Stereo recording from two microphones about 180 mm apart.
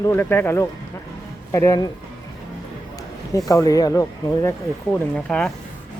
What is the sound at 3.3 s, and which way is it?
Speech, 20° left (ahead or behind).